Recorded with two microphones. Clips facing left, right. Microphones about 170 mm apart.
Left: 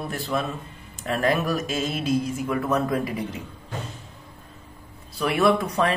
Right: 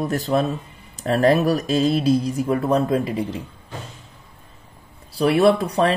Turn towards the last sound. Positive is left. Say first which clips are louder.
# right 4 dB
turn(degrees=-30)  # may be behind; listen again after turning